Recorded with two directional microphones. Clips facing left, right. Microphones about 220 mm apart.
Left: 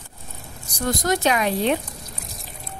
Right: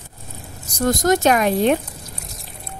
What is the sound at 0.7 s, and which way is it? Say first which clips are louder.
A woman's voice: right 5 dB; 45° right (ahead or behind).